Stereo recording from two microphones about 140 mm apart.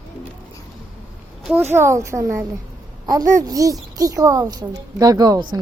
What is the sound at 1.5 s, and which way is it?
A woman's voice, 15° right (ahead or behind).